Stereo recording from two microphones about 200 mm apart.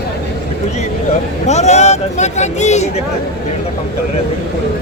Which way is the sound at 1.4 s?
35° left (ahead or behind).